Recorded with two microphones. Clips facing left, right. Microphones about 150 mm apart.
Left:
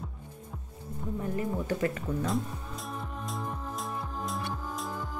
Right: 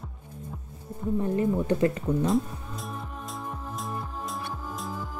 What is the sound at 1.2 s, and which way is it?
Speech, 30° right (ahead or behind).